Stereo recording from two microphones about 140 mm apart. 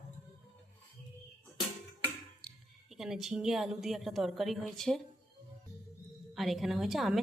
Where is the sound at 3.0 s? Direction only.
5° right (ahead or behind).